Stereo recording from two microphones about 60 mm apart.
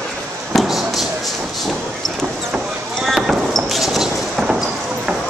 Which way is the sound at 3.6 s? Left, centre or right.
Centre.